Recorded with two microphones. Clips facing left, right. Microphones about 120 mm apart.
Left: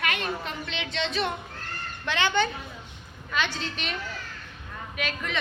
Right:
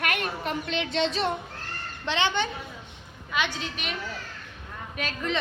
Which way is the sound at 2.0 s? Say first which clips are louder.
Left 1 dB; 25° right (ahead or behind).